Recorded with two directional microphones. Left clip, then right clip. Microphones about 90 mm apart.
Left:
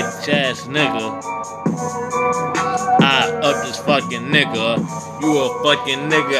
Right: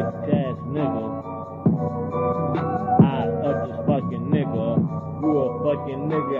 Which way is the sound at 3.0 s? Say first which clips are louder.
Left 8 dB; centre (ahead or behind).